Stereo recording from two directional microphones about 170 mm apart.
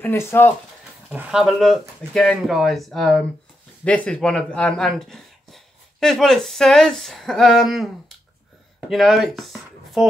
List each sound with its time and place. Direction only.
0.0 s speech: 15° left (ahead or behind)
1.1 s speech: 5° right (ahead or behind)